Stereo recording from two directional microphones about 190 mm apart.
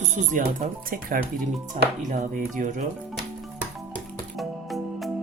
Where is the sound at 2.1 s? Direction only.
45° right (ahead or behind).